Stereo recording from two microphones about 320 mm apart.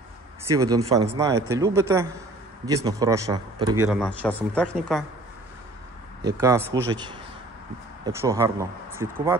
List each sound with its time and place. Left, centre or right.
0.5 s a man's voice: centre
6.3 s speech: centre